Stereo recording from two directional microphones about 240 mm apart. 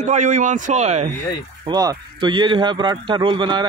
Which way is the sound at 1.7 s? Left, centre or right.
Centre.